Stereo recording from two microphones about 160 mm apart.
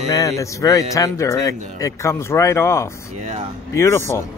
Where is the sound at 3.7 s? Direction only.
15° left (ahead or behind).